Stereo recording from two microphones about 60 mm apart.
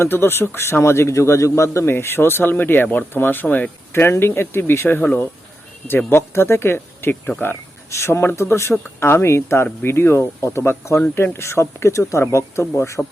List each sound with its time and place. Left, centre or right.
0.0 s a man's voice: left
3.4 s speech: left
3.9 s speech: left
6.1 s speech: left
7.9 s a man's voice: left